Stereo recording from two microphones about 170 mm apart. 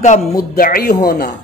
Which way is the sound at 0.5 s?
60° left (ahead or behind).